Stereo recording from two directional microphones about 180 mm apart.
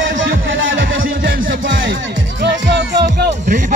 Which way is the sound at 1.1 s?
55° right (ahead or behind).